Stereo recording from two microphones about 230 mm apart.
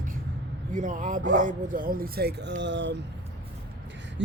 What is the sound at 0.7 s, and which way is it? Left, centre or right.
Speech, right.